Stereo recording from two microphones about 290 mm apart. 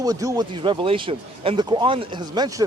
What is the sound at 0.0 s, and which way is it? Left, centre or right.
Speech, centre.